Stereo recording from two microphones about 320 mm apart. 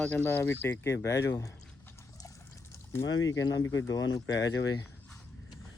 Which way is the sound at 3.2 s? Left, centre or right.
Centre.